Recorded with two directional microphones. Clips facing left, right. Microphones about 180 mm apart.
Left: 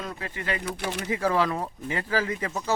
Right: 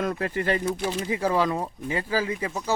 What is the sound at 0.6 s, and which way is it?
Speech, 65° left (ahead or behind).